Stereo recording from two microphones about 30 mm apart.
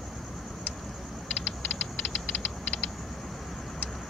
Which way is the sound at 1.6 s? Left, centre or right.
Left.